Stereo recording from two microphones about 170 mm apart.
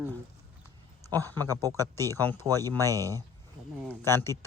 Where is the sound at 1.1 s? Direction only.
20° right (ahead or behind).